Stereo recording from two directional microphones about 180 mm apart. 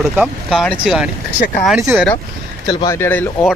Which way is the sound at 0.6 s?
5° left (ahead or behind).